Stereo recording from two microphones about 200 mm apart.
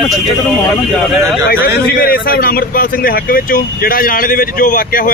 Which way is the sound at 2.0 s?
50° left (ahead or behind).